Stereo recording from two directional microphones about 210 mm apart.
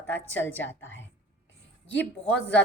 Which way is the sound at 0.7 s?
65° left (ahead or behind).